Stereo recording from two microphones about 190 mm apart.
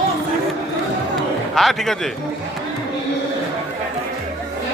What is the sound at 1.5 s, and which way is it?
Speech, centre (ahead or behind).